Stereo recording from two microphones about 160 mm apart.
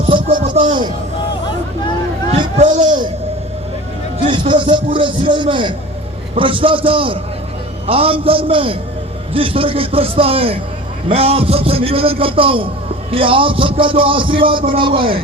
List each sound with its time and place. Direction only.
0.0 s music: 35° right (ahead or behind)
0.5 s a sound: 40° right (ahead or behind)
2.6 s speech: 50° right (ahead or behind)
4.3 s a man's voice: 30° right (ahead or behind)